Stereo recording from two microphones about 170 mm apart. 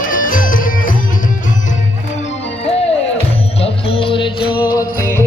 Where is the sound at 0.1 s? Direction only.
55° left (ahead or behind).